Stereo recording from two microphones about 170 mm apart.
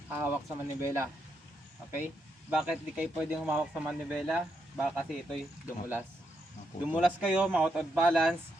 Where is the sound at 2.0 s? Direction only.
5° right (ahead or behind).